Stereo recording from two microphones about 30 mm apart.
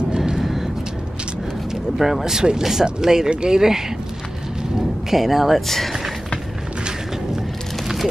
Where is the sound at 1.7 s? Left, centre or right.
Centre.